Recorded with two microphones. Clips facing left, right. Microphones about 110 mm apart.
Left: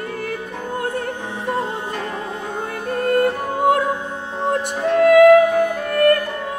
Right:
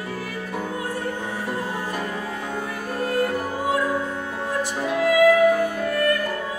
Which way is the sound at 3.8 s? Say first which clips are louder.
Left 1 dB; 25° left (ahead or behind).